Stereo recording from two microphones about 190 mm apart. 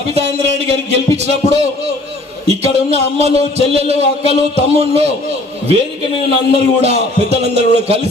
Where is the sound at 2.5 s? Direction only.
35° right (ahead or behind).